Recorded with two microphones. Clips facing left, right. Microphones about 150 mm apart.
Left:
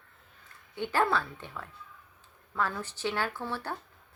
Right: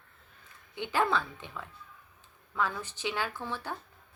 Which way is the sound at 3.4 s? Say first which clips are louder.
Left 2 dB; 10° left (ahead or behind).